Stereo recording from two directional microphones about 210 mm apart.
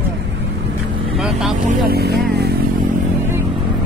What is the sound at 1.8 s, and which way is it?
Speech, 50° right (ahead or behind).